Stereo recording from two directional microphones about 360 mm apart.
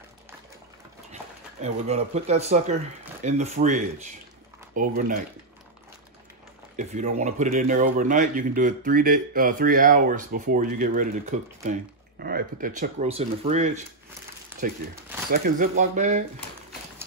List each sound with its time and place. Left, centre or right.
1.6 s speech: centre
6.8 s speech: centre
15.2 s speech: right